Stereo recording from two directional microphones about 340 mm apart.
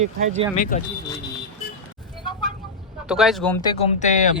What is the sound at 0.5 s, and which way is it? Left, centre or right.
Speech, left.